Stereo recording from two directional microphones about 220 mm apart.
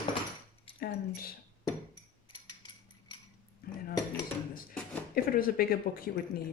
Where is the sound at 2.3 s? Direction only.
20° left (ahead or behind).